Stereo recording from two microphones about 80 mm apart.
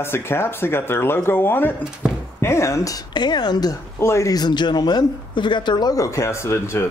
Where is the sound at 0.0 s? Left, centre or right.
Left.